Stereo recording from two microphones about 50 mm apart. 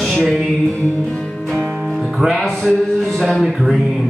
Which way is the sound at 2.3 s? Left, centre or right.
Centre.